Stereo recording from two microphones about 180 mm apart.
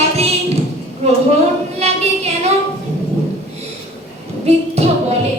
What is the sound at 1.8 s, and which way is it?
Female singing, 35° right (ahead or behind).